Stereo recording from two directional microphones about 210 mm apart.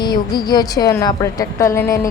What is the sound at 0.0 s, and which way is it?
A woman's voice, 20° left (ahead or behind).